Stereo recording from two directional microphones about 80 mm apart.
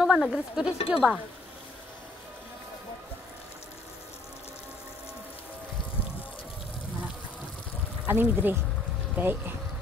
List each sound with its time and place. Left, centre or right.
0.0 s speech: centre
8.1 s speech: right